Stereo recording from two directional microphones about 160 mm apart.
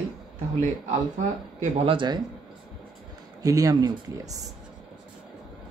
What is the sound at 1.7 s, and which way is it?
Speech, 35° right (ahead or behind).